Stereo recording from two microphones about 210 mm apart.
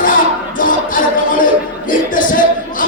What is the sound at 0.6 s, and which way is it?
Music, 40° left (ahead or behind).